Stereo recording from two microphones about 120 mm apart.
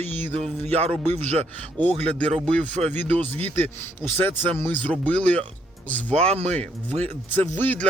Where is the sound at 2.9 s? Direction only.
15° left (ahead or behind).